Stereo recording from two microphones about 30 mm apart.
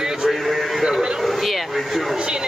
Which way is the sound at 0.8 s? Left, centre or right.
Right.